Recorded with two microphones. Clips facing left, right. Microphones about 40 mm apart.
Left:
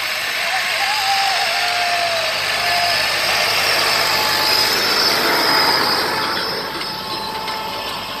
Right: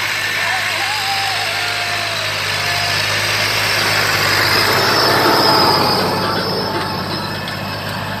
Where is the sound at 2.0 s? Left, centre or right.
Right.